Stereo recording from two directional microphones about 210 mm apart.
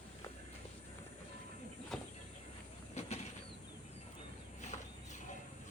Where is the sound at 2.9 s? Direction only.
30° left (ahead or behind).